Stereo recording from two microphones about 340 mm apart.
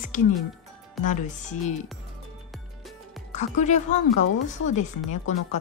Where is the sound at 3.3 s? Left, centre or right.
Left.